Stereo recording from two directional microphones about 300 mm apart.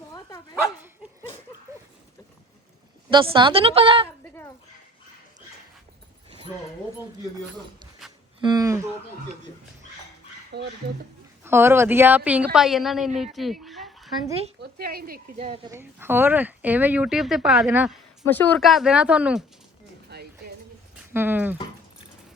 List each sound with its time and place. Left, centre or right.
0.1 s dog: centre
0.5 s dog: centre
3.1 s a woman's voice: centre
4.2 s a sound: centre
8.4 s a woman's voice: centre
10.5 s speech: right
11.4 s speech: centre
13.1 s fowl: centre
14.3 s speech: centre
14.6 s speech: right
15.8 s speech: centre
20.1 s music: right
21.1 s a woman's voice: centre